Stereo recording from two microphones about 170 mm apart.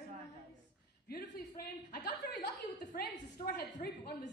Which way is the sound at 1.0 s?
65° left (ahead or behind).